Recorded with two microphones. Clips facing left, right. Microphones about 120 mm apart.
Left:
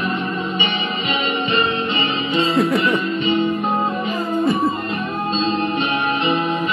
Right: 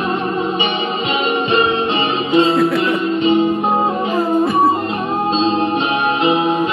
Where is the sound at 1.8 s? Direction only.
75° right (ahead or behind).